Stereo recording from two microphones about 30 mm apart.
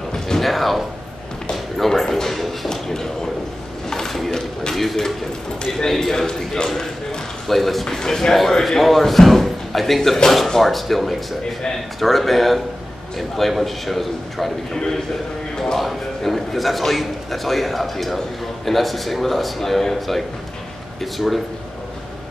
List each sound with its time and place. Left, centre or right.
0.4 s music: centre
1.8 s a sound: centre
2.3 s music: centre
2.7 s a sound: centre
4.7 s speech: centre
7.4 s a man's voice: centre
7.8 s a man's voice: centre
14.7 s speech: centre
15.5 s a sound: centre
15.8 s a man's voice: centre